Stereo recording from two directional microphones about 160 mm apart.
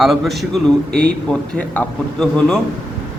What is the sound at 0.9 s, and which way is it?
Speech, 75° right (ahead or behind).